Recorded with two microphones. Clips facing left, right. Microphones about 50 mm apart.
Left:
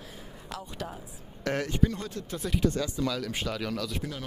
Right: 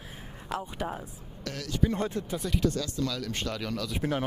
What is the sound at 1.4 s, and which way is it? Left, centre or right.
Speech, left.